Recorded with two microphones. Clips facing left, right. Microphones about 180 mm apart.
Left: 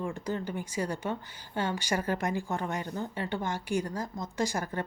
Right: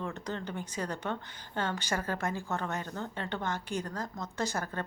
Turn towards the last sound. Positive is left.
turn(degrees=15)  # may be behind; listen again after turning